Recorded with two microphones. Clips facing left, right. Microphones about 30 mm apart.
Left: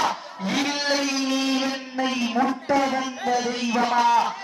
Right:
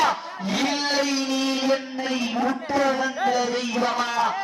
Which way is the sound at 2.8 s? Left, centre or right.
Centre.